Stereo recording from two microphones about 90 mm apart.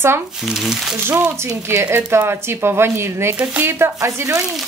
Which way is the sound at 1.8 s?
30° right (ahead or behind).